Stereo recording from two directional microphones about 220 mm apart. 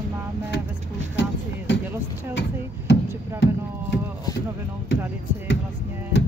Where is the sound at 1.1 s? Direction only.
55° left (ahead or behind).